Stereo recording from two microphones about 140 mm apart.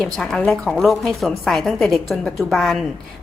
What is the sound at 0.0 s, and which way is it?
A woman's voice, 5° left (ahead or behind).